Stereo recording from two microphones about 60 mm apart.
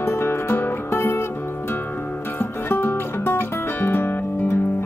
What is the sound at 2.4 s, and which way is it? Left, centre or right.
Music, left.